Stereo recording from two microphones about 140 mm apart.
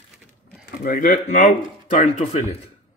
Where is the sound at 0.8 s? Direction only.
75° left (ahead or behind); by 2.6 s 50° left (ahead or behind).